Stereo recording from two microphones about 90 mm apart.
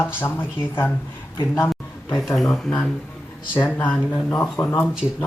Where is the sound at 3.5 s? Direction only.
20° left (ahead or behind).